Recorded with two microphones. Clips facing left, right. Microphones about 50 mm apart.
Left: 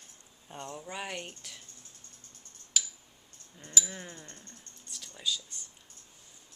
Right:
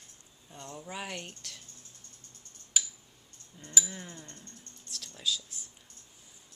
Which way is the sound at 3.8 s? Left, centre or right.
Centre.